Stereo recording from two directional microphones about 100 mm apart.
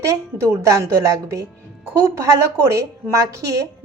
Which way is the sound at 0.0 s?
30° right (ahead or behind).